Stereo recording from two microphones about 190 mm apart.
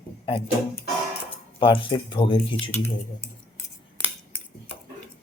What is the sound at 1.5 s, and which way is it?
Speech, 25° left (ahead or behind).